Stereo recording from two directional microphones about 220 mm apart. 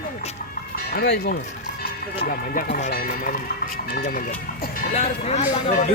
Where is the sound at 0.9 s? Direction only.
45° left (ahead or behind).